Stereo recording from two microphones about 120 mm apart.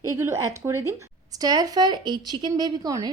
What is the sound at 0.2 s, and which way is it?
A woman's voice, 25° right (ahead or behind).